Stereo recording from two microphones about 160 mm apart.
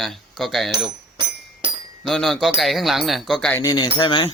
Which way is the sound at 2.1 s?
5° left (ahead or behind).